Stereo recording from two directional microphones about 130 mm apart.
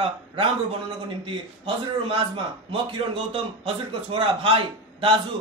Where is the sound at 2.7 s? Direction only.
45° right (ahead or behind).